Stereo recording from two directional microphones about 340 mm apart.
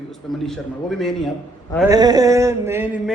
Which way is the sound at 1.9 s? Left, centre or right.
Centre.